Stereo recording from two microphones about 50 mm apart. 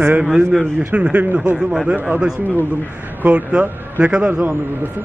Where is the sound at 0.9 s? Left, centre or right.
Right.